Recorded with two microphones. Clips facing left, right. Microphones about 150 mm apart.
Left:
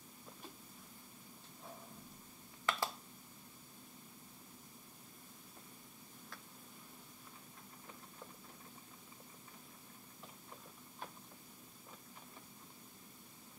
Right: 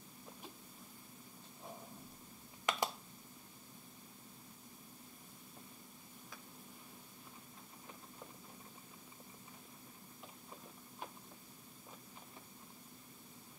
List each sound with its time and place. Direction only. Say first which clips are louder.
2.6 s finger snapping: right 1 dB; 15° right (ahead or behind)